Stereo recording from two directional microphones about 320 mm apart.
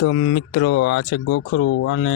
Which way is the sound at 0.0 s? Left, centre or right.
Left.